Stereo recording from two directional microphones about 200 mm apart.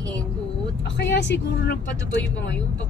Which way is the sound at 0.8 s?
60° left (ahead or behind).